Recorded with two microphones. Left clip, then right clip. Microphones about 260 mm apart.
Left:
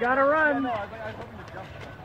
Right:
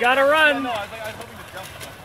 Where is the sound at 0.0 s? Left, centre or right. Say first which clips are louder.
Right 6 dB; right.